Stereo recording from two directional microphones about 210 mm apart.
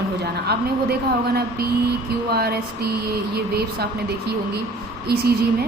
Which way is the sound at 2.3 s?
50° right (ahead or behind).